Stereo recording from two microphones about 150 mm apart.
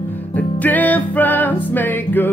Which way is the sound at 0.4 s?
10° left (ahead or behind).